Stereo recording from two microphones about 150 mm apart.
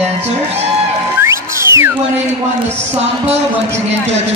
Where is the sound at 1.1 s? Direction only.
15° right (ahead or behind).